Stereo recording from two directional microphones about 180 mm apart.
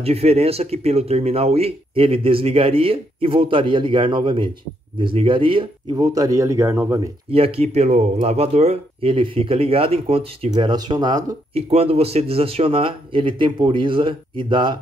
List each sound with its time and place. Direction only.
0.0 s speech: 35° right (ahead or behind); by 7.0 s 15° right (ahead or behind)
7.2 s speech: 30° right (ahead or behind)
11.5 s speech: 35° right (ahead or behind)